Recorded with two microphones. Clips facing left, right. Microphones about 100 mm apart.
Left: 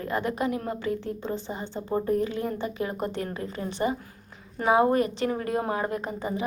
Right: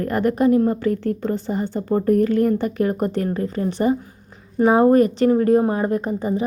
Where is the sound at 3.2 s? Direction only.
40° right (ahead or behind).